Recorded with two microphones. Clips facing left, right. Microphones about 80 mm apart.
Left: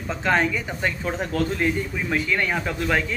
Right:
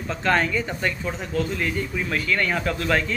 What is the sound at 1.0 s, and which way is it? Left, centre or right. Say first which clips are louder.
Speech: left 2 dB; left.